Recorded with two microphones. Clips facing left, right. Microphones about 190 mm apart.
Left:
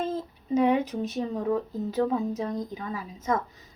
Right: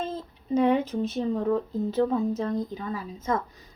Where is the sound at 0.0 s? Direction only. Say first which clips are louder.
Left 3 dB; 40° left (ahead or behind).